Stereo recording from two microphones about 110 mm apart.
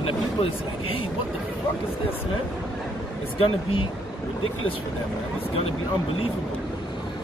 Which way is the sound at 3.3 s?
55° left (ahead or behind).